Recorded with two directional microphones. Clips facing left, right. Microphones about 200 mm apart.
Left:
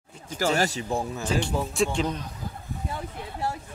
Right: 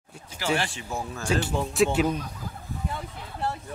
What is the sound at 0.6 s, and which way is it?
Speech, 40° left (ahead or behind).